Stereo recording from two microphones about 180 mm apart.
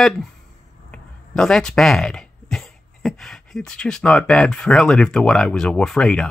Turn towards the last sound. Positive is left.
turn(degrees=5)  # may be behind; listen again after turning